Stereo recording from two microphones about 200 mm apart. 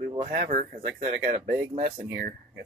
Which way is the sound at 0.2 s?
35° right (ahead or behind).